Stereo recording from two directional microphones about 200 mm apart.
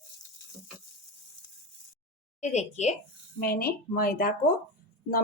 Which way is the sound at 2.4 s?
35° left (ahead or behind).